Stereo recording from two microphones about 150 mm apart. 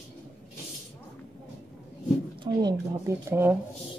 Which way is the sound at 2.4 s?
30° right (ahead or behind).